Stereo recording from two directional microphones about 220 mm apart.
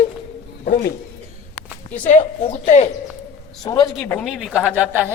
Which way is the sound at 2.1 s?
30° left (ahead or behind).